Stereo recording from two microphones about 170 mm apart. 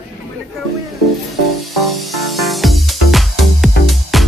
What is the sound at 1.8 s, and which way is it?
Music, centre (ahead or behind).